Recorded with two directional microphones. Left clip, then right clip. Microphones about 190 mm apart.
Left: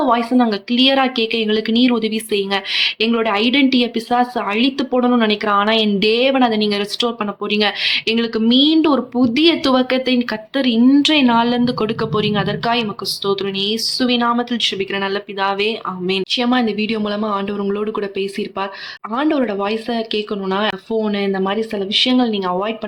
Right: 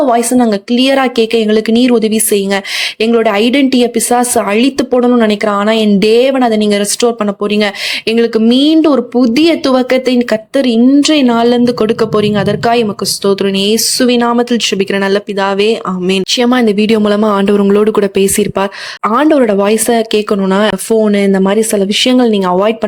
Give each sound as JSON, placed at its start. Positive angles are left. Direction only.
{"t": 0.0, "sound": "a woman's voice", "side_deg": -40}